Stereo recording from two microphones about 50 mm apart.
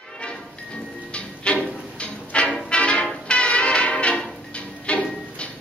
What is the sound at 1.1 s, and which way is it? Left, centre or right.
Music, left.